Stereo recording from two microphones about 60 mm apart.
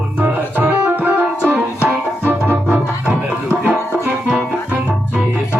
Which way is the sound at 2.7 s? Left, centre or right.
Right.